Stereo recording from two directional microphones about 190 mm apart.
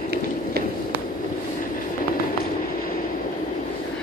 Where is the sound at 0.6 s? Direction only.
55° right (ahead or behind).